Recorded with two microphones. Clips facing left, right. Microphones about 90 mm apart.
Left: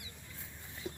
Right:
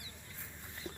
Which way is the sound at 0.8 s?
10° left (ahead or behind).